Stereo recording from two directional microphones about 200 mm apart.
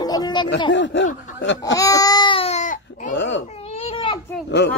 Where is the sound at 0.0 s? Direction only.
20° left (ahead or behind).